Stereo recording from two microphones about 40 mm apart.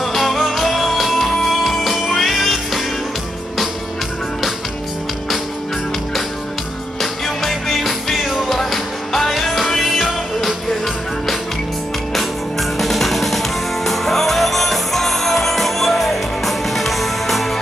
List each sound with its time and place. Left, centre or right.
0.0 s music: centre
7.0 s music: centre
12.1 s music: centre